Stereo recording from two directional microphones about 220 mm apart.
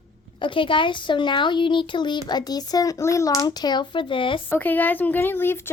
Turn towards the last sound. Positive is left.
turn(degrees=10)  # may be behind; listen again after turning